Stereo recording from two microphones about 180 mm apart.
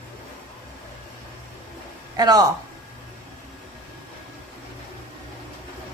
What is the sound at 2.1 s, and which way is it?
Speech, 20° right (ahead or behind).